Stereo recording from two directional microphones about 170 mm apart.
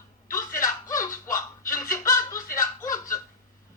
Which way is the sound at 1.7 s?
15° left (ahead or behind).